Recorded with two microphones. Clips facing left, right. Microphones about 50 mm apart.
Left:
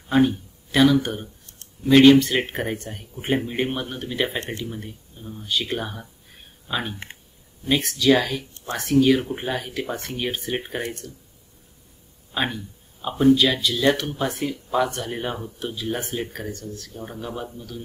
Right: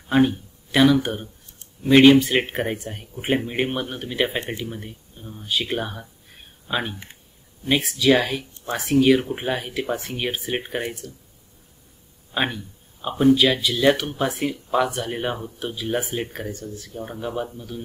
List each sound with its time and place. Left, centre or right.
0.1 s speech: centre
13.3 s speech: centre